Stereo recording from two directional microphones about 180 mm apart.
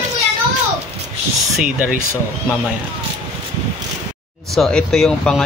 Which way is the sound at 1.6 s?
5° right (ahead or behind).